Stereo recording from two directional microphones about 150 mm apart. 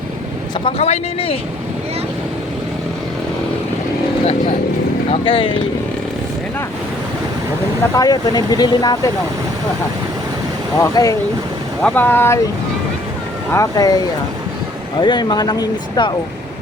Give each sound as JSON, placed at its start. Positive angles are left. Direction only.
{"t": 0.6, "sound": "speech", "side_deg": 45}
{"t": 5.2, "sound": "speech", "side_deg": 35}
{"t": 7.9, "sound": "speech", "side_deg": 25}
{"t": 10.8, "sound": "speech", "side_deg": 20}
{"t": 11.8, "sound": "speech", "side_deg": 10}
{"t": 13.5, "sound": "speech", "side_deg": 25}
{"t": 15.0, "sound": "speech", "side_deg": 30}